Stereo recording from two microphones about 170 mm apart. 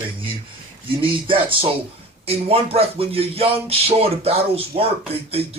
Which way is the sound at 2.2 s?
35° right (ahead or behind).